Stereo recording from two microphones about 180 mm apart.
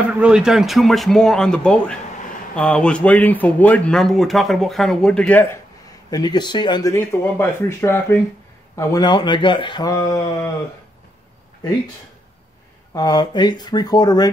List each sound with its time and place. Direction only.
0.2 s speech: 5° right (ahead or behind)
6.0 s speech: 20° left (ahead or behind)
12.9 s speech: 20° left (ahead or behind)